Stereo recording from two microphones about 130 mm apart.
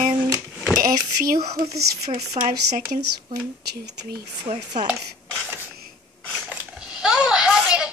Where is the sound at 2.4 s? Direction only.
50° right (ahead or behind).